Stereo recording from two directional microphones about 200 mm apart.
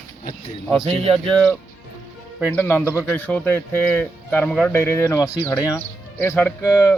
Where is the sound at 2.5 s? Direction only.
10° left (ahead or behind).